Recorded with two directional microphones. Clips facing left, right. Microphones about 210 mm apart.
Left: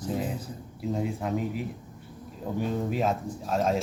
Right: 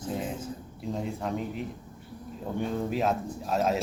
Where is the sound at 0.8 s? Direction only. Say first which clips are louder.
Left 3 dB; 5° left (ahead or behind).